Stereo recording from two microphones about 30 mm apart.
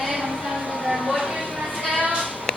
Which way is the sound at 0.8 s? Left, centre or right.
Right.